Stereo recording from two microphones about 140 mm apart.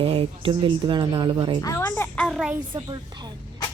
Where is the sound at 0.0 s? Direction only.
45° right (ahead or behind).